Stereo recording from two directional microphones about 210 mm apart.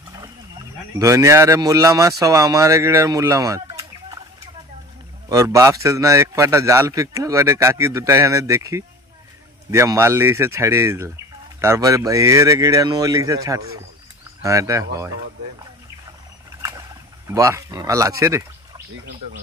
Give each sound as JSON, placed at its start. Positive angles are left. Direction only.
{"t": 0.9, "sound": "a man's voice", "side_deg": -15}
{"t": 5.3, "sound": "a man's voice", "side_deg": -15}
{"t": 17.3, "sound": "a man's voice", "side_deg": -15}